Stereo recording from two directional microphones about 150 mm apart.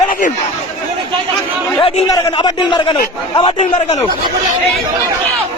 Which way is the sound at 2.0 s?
25° left (ahead or behind).